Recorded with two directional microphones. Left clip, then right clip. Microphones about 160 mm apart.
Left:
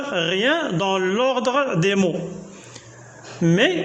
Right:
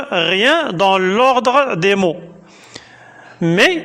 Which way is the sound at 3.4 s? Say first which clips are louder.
Right 6 dB; 40° right (ahead or behind).